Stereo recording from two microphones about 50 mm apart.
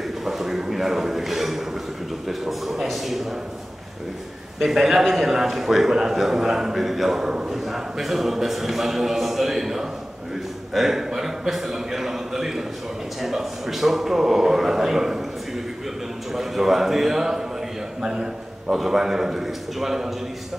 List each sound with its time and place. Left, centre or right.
0.2 s a man's voice: centre
4.6 s a man's voice: centre
10.7 s a sound: centre
13.2 s a man's voice: centre
16.3 s a man's voice: centre